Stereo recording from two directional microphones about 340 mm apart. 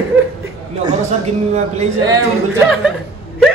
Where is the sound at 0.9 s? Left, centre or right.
Centre.